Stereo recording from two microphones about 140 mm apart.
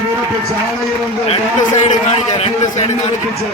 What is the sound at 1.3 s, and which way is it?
A man's voice, 55° left (ahead or behind).